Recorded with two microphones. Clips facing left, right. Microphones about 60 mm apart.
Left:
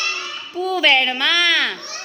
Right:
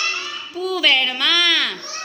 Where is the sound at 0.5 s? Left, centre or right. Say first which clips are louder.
Left 2 dB; left.